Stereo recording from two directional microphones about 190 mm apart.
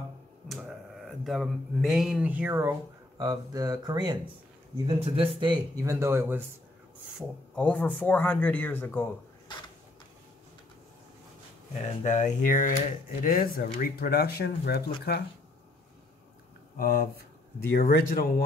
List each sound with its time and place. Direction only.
0.5 s speech: centre (ahead or behind); by 5.3 s 30° right (ahead or behind)
5.4 s speech: 15° right (ahead or behind)
7.2 s speech: 5° left (ahead or behind)
11.8 s speech: 40° left (ahead or behind); by 15.2 s 55° left (ahead or behind)
16.7 s speech: 50° left (ahead or behind)